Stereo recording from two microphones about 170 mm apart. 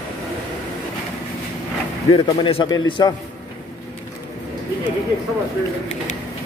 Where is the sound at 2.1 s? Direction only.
30° left (ahead or behind).